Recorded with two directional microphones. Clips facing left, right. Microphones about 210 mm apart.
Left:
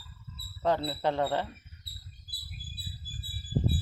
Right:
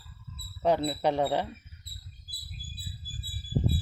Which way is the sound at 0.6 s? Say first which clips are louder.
Right 3 dB; 15° right (ahead or behind).